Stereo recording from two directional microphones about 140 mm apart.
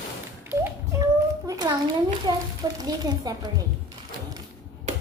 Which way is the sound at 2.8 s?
30° right (ahead or behind).